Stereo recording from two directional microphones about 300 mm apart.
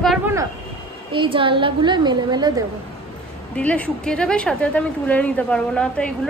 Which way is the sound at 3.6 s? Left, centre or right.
Centre.